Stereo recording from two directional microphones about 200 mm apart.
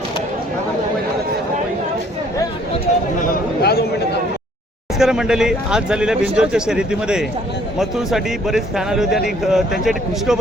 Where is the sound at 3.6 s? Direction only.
55° left (ahead or behind).